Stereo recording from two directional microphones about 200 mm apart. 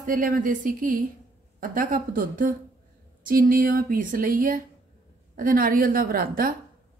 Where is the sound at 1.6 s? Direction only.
45° right (ahead or behind).